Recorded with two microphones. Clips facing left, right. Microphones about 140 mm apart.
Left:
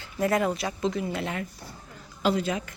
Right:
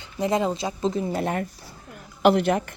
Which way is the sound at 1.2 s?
50° right (ahead or behind).